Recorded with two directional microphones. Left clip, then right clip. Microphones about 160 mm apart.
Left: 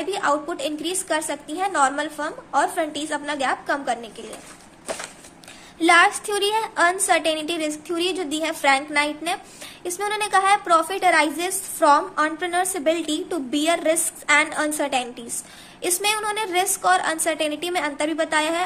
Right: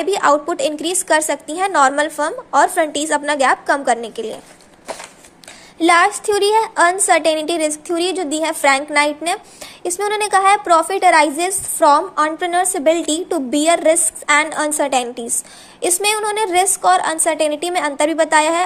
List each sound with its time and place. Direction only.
0.0 s a woman's voice: 45° right (ahead or behind)
5.8 s a woman's voice: 30° right (ahead or behind)